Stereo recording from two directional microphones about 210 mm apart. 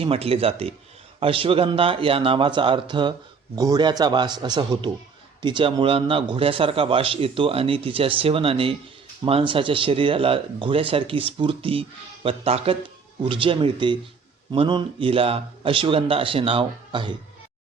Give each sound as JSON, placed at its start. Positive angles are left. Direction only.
{"t": 0.0, "sound": "speech", "side_deg": -25}